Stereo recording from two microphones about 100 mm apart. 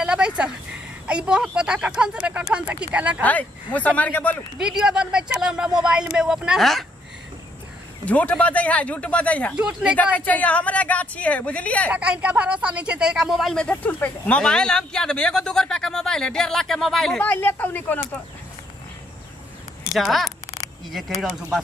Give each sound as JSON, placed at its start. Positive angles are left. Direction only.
{"t": 0.0, "sound": "a sound", "side_deg": -10}
{"t": 1.0, "sound": "speech", "side_deg": -10}
{"t": 3.3, "sound": "speech", "side_deg": 15}
{"t": 4.6, "sound": "speech", "side_deg": -5}
{"t": 8.0, "sound": "speech", "side_deg": 15}
{"t": 9.6, "sound": "speech", "side_deg": -10}
{"t": 10.1, "sound": "speech", "side_deg": 15}
{"t": 11.9, "sound": "speech", "side_deg": -10}
{"t": 17.2, "sound": "speech", "side_deg": 20}
{"t": 19.9, "sound": "speech", "side_deg": 0}